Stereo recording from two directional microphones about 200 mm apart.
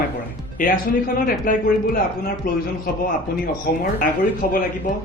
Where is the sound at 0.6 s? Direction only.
40° left (ahead or behind).